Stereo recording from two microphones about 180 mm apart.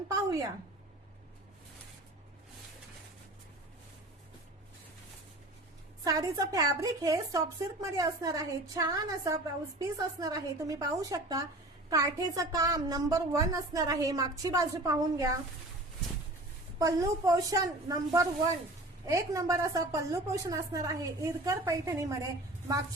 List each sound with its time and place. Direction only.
6.1 s speech: 20° right (ahead or behind)
16.7 s a woman's voice: 20° right (ahead or behind)